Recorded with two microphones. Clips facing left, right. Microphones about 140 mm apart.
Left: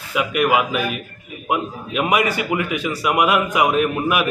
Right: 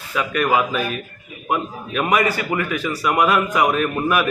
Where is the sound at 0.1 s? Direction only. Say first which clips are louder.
Left 1 dB; 10° left (ahead or behind).